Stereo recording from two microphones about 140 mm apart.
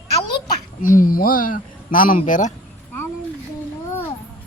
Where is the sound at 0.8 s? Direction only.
75° left (ahead or behind).